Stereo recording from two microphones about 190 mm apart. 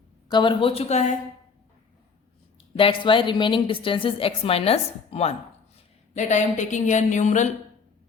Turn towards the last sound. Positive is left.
turn(degrees=40)  # may be behind; listen again after turning